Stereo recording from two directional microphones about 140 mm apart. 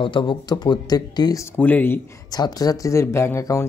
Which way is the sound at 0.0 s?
35° left (ahead or behind).